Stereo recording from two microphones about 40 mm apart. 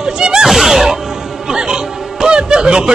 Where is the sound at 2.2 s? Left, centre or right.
Centre.